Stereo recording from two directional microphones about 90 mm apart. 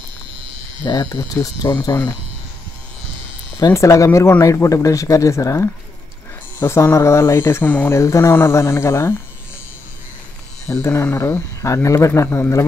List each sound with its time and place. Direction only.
0.8 s speech: 50° left (ahead or behind)
3.5 s speech: 35° left (ahead or behind)
10.7 s speech: 30° left (ahead or behind)